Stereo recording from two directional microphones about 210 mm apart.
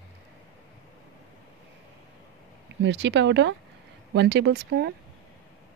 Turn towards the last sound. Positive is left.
turn(degrees=-50)  # may be behind; listen again after turning